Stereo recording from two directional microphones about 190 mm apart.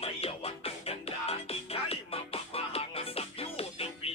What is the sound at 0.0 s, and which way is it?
Music, 30° left (ahead or behind).